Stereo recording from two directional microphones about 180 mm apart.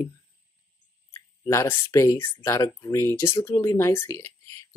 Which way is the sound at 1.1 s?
15° left (ahead or behind).